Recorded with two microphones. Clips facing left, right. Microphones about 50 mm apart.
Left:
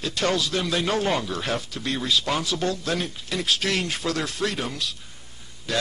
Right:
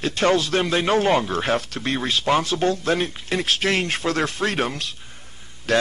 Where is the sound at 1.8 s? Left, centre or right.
Right.